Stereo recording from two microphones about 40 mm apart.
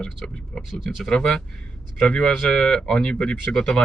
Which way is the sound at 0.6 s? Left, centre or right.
Centre.